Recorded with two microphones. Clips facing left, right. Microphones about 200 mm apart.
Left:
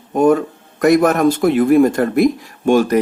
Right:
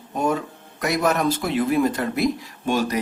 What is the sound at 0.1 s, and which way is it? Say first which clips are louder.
Speech: left 10 dB; 50° left (ahead or behind).